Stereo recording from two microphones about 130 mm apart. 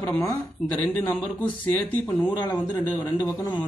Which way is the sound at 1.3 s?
10° left (ahead or behind).